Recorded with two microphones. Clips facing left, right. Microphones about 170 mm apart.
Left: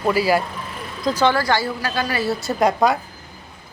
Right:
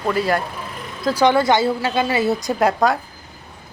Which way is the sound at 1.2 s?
20° right (ahead or behind).